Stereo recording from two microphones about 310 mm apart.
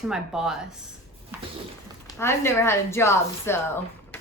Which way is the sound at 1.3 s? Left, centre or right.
Centre.